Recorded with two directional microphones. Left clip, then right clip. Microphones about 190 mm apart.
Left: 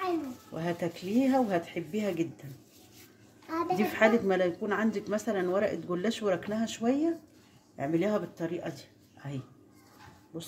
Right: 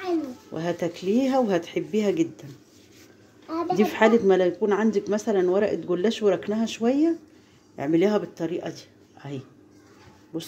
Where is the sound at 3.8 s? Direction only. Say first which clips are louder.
Right 7 dB; 30° right (ahead or behind).